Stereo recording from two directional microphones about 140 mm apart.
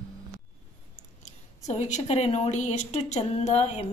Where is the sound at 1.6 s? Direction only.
55° left (ahead or behind).